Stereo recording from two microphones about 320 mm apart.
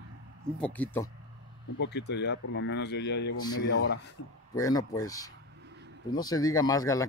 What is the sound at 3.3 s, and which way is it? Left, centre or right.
Speech, left.